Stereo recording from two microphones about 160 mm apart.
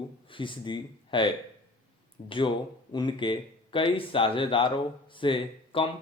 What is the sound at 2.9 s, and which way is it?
Speech, 30° left (ahead or behind).